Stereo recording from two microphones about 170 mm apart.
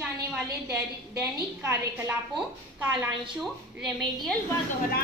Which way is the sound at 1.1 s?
15° right (ahead or behind).